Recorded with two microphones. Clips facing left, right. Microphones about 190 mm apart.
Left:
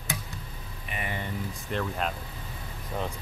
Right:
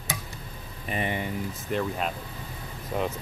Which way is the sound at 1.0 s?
15° right (ahead or behind).